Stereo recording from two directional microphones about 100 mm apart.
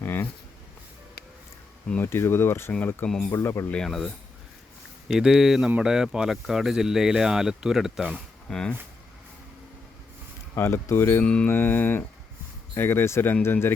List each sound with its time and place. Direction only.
0.0 s a sound: 20° left (ahead or behind)
2.0 s speech: 25° left (ahead or behind)
3.1 s speech: 5° left (ahead or behind)
3.3 s speech: 30° left (ahead or behind)
3.7 s speech: 5° left (ahead or behind)
8.4 s mantra: 10° left (ahead or behind)
10.5 s speech: 30° left (ahead or behind)
11.2 s mantra: 10° left (ahead or behind)
11.5 s speech: 20° left (ahead or behind)